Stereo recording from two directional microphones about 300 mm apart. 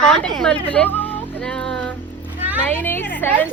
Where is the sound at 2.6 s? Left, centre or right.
Centre.